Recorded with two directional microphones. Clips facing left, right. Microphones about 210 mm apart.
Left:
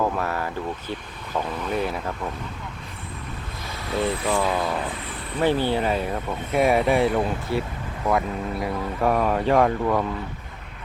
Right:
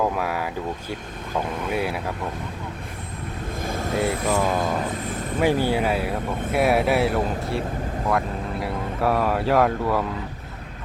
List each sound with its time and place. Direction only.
0.2 s speech: 10° right (ahead or behind)
3.6 s vehicle: 50° right (ahead or behind)
5.4 s speech: 10° right (ahead or behind)
8.6 s speech: 5° right (ahead or behind)